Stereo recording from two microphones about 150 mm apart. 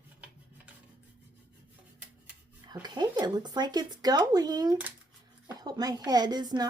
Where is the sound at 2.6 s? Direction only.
25° right (ahead or behind).